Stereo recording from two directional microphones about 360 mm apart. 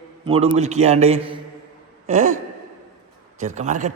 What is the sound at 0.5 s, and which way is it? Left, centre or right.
Speech, centre.